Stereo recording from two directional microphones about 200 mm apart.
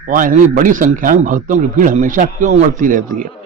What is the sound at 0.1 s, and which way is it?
Speech, 40° right (ahead or behind).